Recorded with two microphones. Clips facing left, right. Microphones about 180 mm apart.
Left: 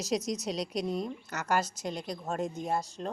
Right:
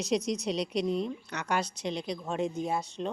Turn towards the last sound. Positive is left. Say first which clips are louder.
# right 1 dB
turn(degrees=0)  # may be behind; listen again after turning